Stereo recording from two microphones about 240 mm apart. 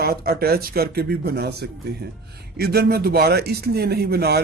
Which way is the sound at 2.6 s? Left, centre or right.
Right.